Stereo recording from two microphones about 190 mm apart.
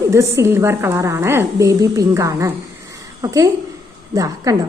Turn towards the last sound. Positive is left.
turn(degrees=-15)  # may be behind; listen again after turning